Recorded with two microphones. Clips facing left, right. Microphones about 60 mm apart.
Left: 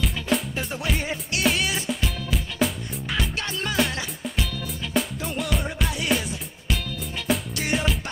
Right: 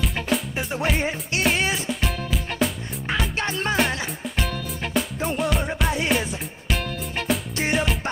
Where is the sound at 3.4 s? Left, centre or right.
Right.